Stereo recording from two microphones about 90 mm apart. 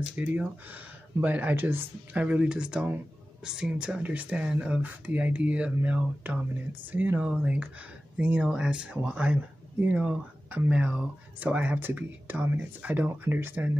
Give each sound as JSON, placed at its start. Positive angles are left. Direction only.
{"t": 0.1, "sound": "speech", "side_deg": -15}